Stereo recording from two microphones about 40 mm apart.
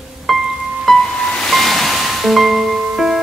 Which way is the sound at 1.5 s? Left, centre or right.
Centre.